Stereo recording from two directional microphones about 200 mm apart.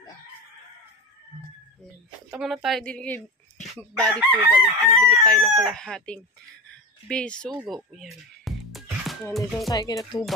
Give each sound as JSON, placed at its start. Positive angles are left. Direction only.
{"t": 2.3, "sound": "a woman's voice", "side_deg": 0}
{"t": 5.2, "sound": "chicken", "side_deg": 5}
{"t": 5.7, "sound": "a woman's voice", "side_deg": 5}
{"t": 9.7, "sound": "speech", "side_deg": 20}